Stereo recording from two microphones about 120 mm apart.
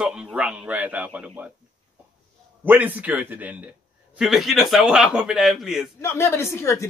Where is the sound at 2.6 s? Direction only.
15° right (ahead or behind).